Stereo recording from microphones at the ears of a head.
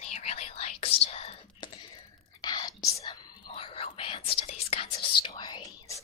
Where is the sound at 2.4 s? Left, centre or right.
Left.